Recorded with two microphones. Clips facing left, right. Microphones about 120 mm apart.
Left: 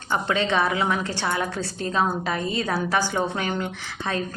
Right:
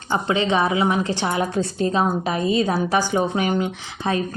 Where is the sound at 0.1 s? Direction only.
20° right (ahead or behind).